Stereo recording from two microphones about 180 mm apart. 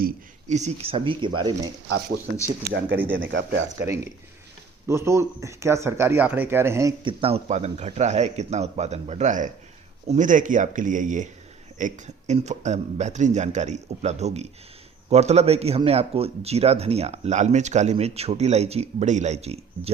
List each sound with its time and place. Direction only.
0.0 s speech: 40° right (ahead or behind)
2.6 s speech: 70° right (ahead or behind)
3.1 s speech: 85° right
3.8 s speech: 15° right (ahead or behind); by 19.9 s 35° right (ahead or behind)